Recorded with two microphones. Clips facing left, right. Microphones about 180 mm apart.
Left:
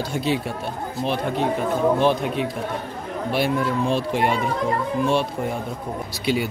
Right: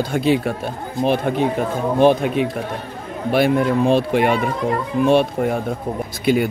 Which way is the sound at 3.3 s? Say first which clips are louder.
Right 6 dB; 55° right (ahead or behind).